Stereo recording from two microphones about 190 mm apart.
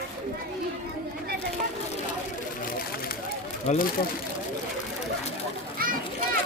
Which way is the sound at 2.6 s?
50° left (ahead or behind).